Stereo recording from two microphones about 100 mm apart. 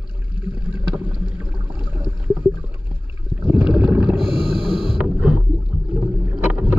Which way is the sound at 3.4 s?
15° right (ahead or behind).